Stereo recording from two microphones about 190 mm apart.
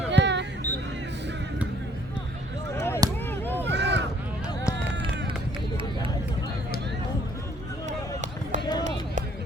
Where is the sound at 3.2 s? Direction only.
10° left (ahead or behind).